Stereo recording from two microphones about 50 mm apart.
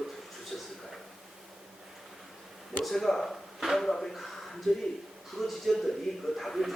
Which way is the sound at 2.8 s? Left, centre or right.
Centre.